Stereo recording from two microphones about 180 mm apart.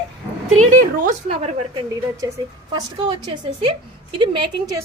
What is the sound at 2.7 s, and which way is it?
A woman's voice, 25° right (ahead or behind).